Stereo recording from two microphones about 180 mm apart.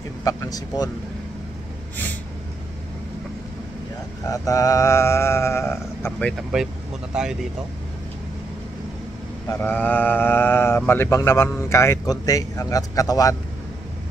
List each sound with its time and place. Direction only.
0.2 s speech: 20° left (ahead or behind)
4.3 s speech: 20° left (ahead or behind); by 6.7 s centre (ahead or behind)
9.5 s speech: 10° left (ahead or behind)